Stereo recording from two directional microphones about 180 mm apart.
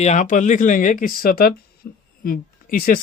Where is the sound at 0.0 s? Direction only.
40° left (ahead or behind).